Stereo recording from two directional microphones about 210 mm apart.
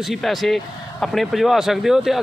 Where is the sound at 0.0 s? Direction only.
Centre (ahead or behind).